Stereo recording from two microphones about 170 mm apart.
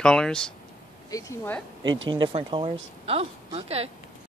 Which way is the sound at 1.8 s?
90° right.